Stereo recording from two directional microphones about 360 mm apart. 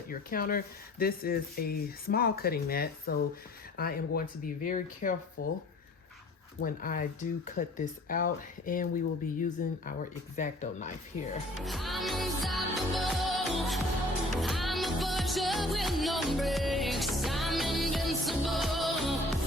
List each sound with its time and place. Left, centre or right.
0.1 s speech: left
5.4 s speech: left
6.6 s speech: left
11.6 s music: centre